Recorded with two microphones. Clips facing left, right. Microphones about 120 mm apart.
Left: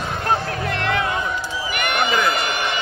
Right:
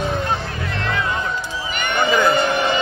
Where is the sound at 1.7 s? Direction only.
65° left (ahead or behind).